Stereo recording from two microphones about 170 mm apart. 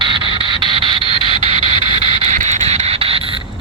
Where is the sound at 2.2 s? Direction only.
45° right (ahead or behind).